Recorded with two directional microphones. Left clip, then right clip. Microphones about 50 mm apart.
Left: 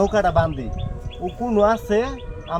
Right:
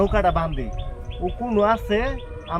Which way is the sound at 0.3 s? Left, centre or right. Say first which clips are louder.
Left 2 dB; left.